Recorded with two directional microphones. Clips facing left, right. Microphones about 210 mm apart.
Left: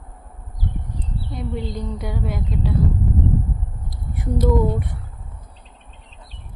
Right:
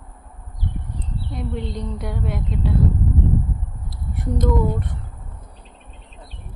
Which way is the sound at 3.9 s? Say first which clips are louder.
Left 1 dB; centre (ahead or behind).